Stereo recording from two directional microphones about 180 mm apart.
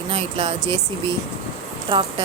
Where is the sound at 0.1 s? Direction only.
30° right (ahead or behind).